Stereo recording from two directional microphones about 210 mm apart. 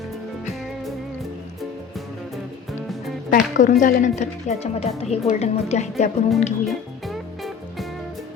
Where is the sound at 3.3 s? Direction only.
40° left (ahead or behind).